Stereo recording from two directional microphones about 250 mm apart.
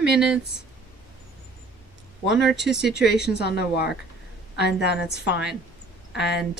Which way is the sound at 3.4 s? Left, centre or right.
Left.